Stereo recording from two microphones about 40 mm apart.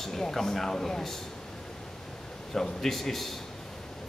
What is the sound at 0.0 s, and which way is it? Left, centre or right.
A man's voice, centre.